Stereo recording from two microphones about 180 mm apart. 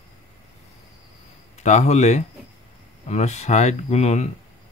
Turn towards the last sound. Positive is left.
turn(degrees=35)  # may be behind; listen again after turning